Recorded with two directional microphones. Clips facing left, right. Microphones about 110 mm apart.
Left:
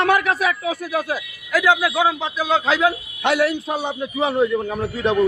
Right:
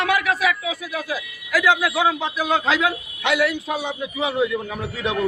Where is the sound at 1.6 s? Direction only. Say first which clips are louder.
Left 2 dB; 20° left (ahead or behind).